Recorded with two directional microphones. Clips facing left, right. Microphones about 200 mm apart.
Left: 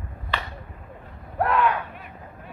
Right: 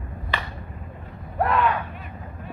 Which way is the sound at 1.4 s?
Centre (ahead or behind).